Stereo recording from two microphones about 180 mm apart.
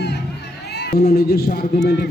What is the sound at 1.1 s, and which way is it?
Speech, 60° left (ahead or behind).